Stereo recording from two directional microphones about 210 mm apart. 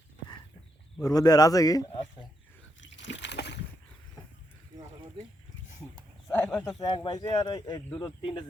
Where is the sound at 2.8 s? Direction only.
60° left (ahead or behind).